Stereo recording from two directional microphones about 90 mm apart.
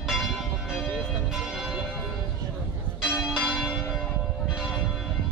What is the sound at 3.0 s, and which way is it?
Church bell, centre (ahead or behind).